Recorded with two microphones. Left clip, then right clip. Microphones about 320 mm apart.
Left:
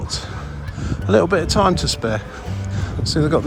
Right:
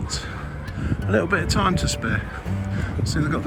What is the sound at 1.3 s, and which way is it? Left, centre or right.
Speech, centre.